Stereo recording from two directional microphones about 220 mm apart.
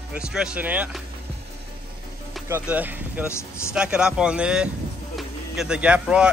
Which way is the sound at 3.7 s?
5° right (ahead or behind).